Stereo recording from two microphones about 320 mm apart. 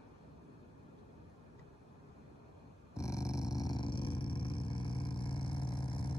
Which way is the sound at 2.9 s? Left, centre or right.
Centre.